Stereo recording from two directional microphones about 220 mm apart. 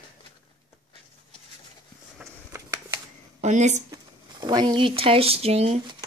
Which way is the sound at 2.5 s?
15° right (ahead or behind).